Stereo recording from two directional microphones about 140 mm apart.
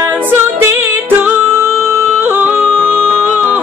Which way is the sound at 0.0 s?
15° right (ahead or behind).